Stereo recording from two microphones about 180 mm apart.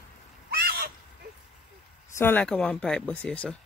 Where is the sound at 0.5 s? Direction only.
60° right (ahead or behind).